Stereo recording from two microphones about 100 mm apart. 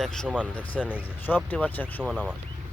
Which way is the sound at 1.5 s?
15° left (ahead or behind).